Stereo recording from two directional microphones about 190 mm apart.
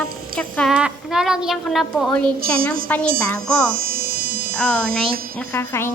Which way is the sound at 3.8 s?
50° right (ahead or behind).